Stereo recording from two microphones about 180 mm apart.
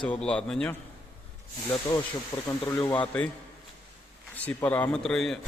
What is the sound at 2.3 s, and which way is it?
Speech, 25° left (ahead or behind).